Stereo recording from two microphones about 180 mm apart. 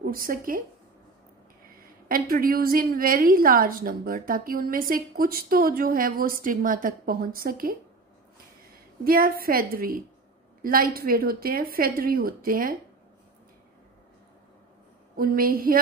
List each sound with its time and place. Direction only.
0.0 s speech: 50° right (ahead or behind)
2.0 s a woman's voice: 55° right (ahead or behind)
9.0 s a woman's voice: 55° right (ahead or behind)
15.1 s a woman's voice: 55° right (ahead or behind)